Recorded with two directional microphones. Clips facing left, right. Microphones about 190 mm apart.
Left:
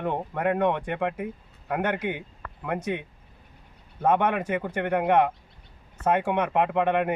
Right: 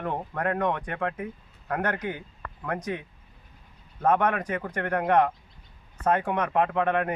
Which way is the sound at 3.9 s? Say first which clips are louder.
Left 1 dB; 10° left (ahead or behind).